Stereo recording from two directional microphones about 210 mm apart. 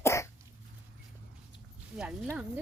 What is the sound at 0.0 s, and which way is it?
Cough, 15° left (ahead or behind).